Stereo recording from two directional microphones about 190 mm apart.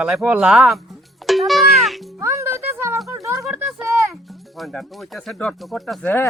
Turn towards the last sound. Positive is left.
turn(degrees=10)  # may be behind; listen again after turning